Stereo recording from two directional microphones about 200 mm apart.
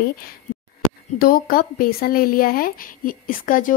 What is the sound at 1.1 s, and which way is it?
Speech, 45° left (ahead or behind).